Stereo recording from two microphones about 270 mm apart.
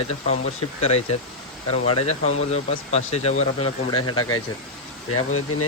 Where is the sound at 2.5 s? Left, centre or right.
Left.